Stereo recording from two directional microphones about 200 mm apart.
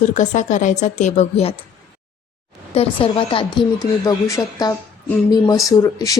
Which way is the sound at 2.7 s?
25° left (ahead or behind).